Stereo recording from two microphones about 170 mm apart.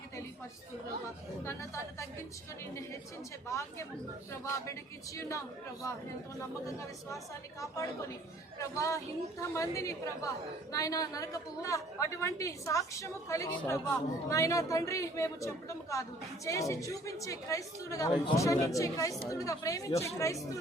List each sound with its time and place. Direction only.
1.5 s speech: 15° left (ahead or behind)
3.5 s speech: 15° left (ahead or behind)
6.7 s a woman's voice: 20° left (ahead or behind)